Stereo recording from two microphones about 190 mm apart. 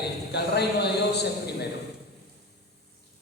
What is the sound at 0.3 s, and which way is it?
Speech, 60° left (ahead or behind).